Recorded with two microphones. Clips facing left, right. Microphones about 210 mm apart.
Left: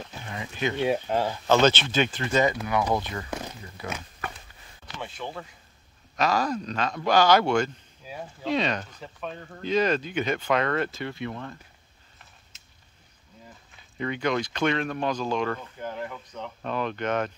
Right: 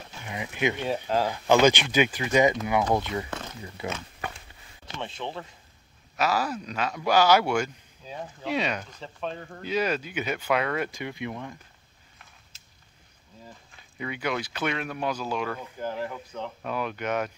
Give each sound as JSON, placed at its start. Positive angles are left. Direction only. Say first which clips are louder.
{"t": 0.3, "sound": "speech", "louder": "right 2 dB", "side_deg": -15}
{"t": 6.1, "sound": "speech", "louder": "left 2 dB", "side_deg": -5}
{"t": 13.9, "sound": "speech", "louder": "left 4 dB", "side_deg": -10}
{"t": 15.8, "sound": "speech", "louder": "right 2 dB", "side_deg": -30}
{"t": 16.6, "sound": "speech", "louder": "left 3 dB", "side_deg": -10}